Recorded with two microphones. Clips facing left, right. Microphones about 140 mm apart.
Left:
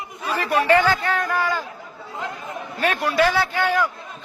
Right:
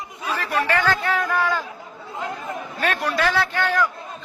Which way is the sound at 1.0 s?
Centre (ahead or behind).